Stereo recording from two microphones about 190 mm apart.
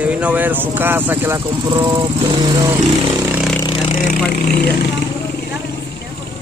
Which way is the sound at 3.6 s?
25° left (ahead or behind).